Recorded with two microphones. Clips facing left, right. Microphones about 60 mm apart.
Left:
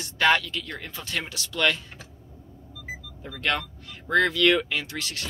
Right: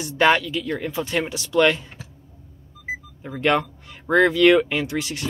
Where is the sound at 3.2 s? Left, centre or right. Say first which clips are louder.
Right 7 dB; right.